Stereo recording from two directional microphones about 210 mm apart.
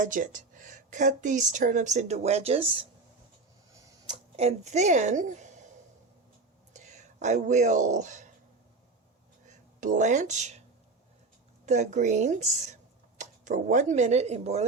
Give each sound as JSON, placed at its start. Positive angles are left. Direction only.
{"t": 0.0, "sound": "speech", "side_deg": -40}
{"t": 4.1, "sound": "speech", "side_deg": -30}
{"t": 6.7, "sound": "speech", "side_deg": -35}
{"t": 9.5, "sound": "speech", "side_deg": -35}
{"t": 11.6, "sound": "speech", "side_deg": -35}